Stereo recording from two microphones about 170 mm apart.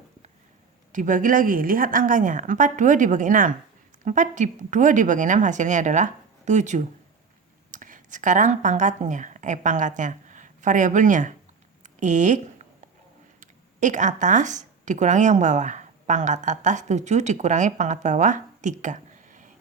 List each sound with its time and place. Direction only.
0.9 s speech: 50° right (ahead or behind)
11.8 s a sound: 45° right (ahead or behind)
13.4 s speech: 45° right (ahead or behind)